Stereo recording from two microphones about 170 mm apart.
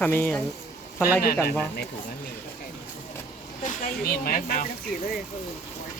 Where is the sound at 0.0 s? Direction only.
10° left (ahead or behind).